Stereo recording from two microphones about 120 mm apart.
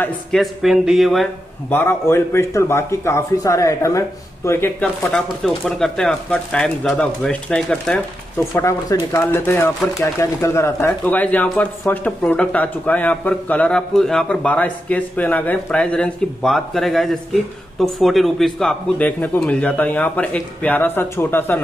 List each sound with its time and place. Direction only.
0.3 s speech: centre (ahead or behind)
1.7 s a man's voice: 15° left (ahead or behind)
5.1 s speech: 5° left (ahead or behind)
8.5 s a man's voice: 25° left (ahead or behind)